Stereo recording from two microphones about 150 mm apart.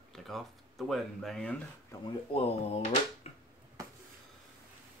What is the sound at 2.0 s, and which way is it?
Speech, 40° left (ahead or behind).